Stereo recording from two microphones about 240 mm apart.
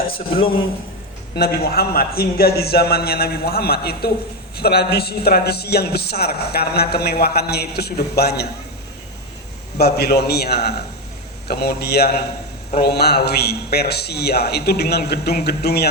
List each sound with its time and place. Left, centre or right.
1.4 s a man's voice: left
9.7 s a man's voice: left